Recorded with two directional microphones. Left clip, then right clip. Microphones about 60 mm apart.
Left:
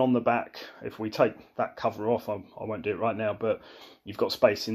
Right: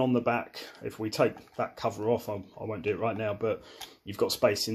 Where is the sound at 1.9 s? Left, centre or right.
Right.